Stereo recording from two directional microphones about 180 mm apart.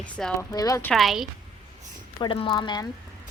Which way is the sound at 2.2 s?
30° left (ahead or behind).